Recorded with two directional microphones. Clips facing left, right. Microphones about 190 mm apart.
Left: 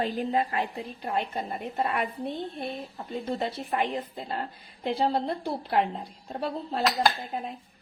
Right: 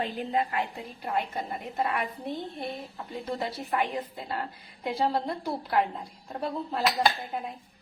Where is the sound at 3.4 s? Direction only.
25° left (ahead or behind).